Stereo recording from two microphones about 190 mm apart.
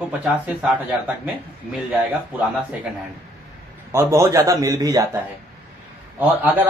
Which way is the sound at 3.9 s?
15° right (ahead or behind).